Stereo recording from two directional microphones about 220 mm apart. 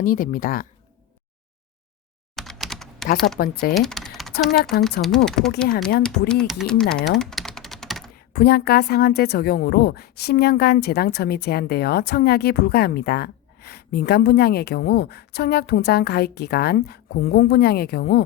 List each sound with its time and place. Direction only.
0.0 s speech: 40° left (ahead or behind)
2.3 s typing: centre (ahead or behind)
3.3 s speech: 45° left (ahead or behind)
3.8 s speech: centre (ahead or behind)
7.2 s typing: centre (ahead or behind)
8.3 s speech: 45° left (ahead or behind)